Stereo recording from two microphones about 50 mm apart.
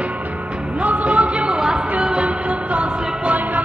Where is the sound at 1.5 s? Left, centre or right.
Centre.